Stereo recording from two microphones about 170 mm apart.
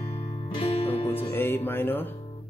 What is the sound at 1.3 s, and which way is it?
Speech, 10° left (ahead or behind).